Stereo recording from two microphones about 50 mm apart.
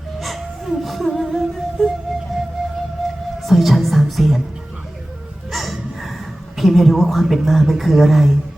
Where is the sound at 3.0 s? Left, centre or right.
Centre.